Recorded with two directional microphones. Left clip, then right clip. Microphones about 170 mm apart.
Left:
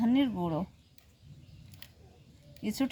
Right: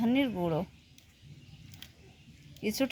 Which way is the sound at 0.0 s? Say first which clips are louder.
Even; 35° right (ahead or behind).